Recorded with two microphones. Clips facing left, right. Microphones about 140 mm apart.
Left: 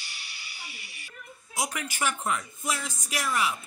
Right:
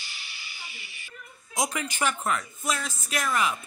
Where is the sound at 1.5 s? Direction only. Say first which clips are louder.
Right 3 dB; 5° left (ahead or behind).